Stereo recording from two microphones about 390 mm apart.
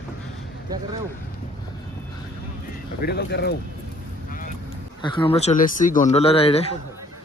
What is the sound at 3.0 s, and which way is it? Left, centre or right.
Speech, left.